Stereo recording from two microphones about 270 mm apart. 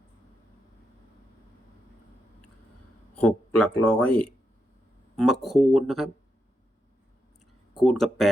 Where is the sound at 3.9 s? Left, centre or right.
Left.